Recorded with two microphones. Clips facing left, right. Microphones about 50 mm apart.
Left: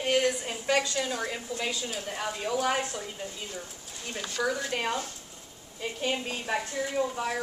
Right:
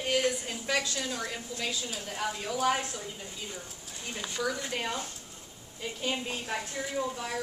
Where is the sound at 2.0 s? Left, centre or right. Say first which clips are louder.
Even; centre.